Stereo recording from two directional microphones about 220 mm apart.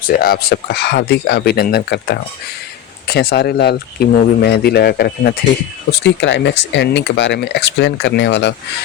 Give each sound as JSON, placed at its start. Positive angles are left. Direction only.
{"t": 0.1, "sound": "speech", "side_deg": 45}